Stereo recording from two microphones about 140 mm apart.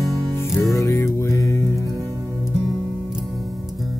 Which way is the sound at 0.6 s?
25° left (ahead or behind).